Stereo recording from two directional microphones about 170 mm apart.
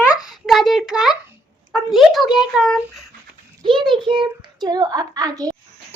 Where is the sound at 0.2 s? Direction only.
Centre (ahead or behind).